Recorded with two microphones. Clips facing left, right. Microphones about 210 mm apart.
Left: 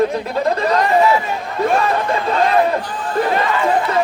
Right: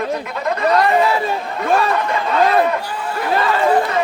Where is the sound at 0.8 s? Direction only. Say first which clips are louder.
Left 1 dB; 35° right (ahead or behind).